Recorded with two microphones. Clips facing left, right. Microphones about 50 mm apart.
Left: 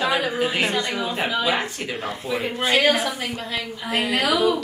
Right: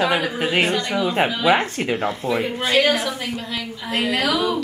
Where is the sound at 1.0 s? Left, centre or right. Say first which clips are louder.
Right 4 dB; right.